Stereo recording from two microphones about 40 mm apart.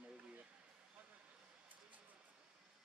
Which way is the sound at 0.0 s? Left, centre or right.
Right.